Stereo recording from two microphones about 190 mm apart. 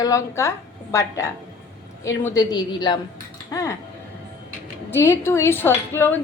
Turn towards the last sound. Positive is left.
turn(degrees=10)  # may be behind; listen again after turning